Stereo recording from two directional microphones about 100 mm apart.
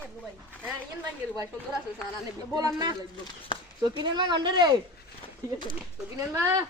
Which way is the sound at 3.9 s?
50° right (ahead or behind).